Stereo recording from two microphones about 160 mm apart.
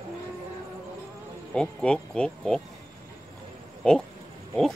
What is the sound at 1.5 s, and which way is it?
Insect, 5° left (ahead or behind).